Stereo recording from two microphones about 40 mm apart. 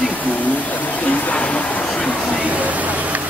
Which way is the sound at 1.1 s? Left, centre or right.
Left.